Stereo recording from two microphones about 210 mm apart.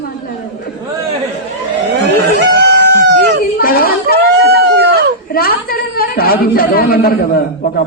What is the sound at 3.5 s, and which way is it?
Speech, 45° left (ahead or behind).